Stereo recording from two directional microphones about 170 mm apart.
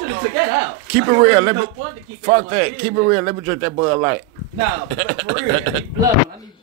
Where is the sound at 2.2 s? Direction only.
35° right (ahead or behind).